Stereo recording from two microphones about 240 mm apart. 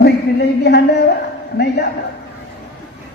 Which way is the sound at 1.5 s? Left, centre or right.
Left.